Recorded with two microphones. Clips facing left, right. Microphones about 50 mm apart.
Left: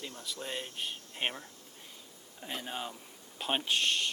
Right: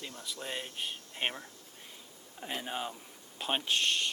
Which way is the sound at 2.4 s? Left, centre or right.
Centre.